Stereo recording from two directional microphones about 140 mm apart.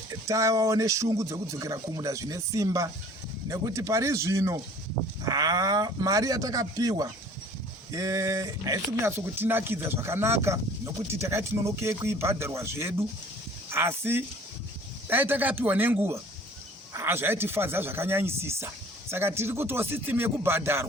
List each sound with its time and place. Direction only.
0.3 s speech: 20° right (ahead or behind)